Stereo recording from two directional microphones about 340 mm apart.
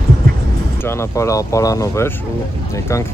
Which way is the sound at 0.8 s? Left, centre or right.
Centre.